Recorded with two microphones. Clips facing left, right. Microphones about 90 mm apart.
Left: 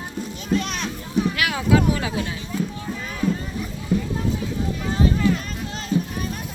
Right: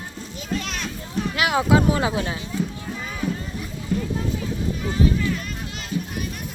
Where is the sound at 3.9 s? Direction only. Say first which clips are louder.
Left 2 dB; 15° left (ahead or behind).